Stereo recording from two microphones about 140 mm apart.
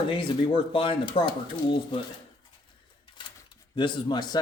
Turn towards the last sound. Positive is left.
turn(degrees=30)  # may be behind; listen again after turning